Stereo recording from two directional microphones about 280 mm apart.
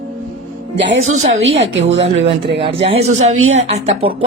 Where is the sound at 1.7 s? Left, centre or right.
Right.